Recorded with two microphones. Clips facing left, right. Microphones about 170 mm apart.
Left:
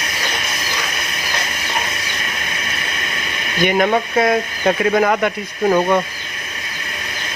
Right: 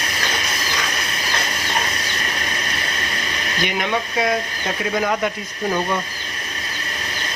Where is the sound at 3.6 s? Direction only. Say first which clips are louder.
Left 8 dB; 50° left (ahead or behind); by 6.0 s 65° left (ahead or behind).